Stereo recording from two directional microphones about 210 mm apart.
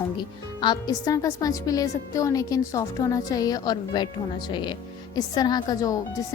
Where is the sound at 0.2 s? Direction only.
20° left (ahead or behind).